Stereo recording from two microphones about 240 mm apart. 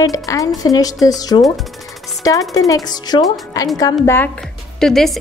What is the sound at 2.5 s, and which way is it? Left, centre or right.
A woman's voice, centre.